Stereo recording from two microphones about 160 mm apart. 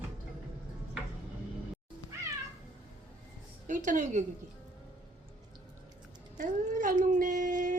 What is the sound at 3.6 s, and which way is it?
Speech, 55° right (ahead or behind).